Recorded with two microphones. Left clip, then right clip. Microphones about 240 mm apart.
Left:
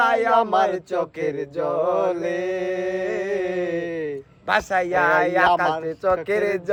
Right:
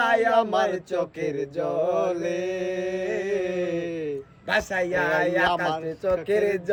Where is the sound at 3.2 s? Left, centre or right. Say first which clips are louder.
Left 2 dB; centre.